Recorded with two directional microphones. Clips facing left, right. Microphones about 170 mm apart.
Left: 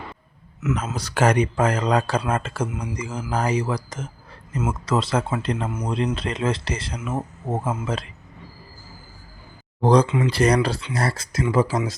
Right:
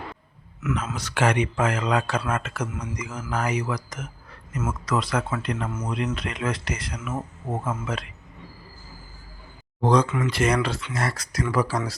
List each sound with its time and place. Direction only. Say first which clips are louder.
0.9 s speech: left 4 dB; 35° left (ahead or behind)
9.8 s speech: left 3 dB; 35° left (ahead or behind)